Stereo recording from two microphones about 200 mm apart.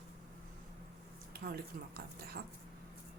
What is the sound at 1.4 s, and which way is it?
Speech, 50° right (ahead or behind).